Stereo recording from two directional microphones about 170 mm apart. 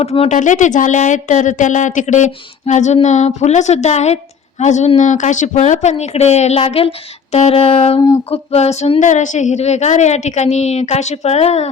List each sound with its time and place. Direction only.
0.0 s speech: 35° left (ahead or behind)